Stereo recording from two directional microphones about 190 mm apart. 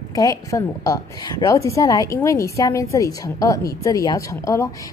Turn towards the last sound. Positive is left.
turn(degrees=15)  # may be behind; listen again after turning